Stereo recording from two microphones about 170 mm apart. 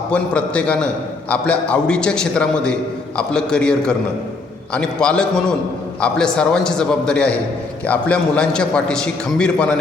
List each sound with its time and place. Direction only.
0.1 s a man's voice: 5° left (ahead or behind)